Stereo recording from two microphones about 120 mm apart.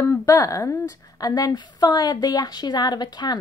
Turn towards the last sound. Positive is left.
turn(degrees=35)  # may be behind; listen again after turning